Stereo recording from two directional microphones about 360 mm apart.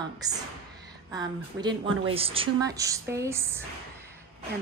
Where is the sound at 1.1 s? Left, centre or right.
Centre.